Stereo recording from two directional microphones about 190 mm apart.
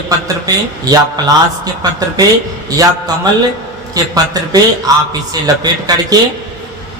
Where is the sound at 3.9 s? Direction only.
20° right (ahead or behind).